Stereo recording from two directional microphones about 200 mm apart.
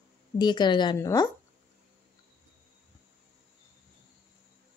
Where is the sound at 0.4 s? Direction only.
20° left (ahead or behind).